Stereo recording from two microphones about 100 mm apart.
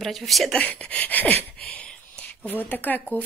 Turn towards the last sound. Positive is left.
turn(degrees=15)  # may be behind; listen again after turning